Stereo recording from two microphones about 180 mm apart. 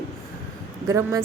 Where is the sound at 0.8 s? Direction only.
15° right (ahead or behind).